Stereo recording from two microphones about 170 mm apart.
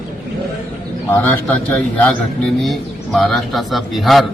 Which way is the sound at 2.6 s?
Centre (ahead or behind).